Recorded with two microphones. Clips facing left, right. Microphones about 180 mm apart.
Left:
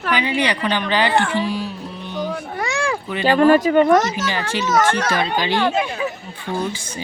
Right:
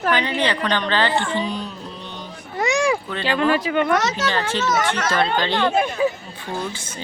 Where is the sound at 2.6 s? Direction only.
20° right (ahead or behind).